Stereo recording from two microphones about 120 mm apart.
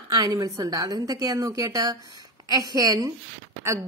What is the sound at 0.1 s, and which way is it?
A woman's voice, 35° right (ahead or behind).